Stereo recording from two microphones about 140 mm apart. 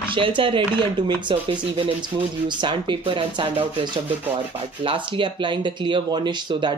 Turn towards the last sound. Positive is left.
turn(degrees=-35)  # may be behind; listen again after turning